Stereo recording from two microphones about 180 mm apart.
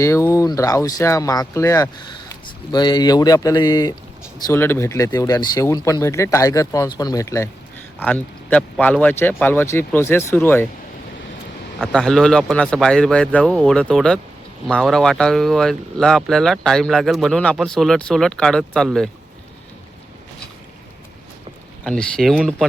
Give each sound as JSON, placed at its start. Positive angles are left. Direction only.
{"t": 0.0, "sound": "a man's voice", "side_deg": 15}
{"t": 11.8, "sound": "speech", "side_deg": 5}
{"t": 21.8, "sound": "speech", "side_deg": 5}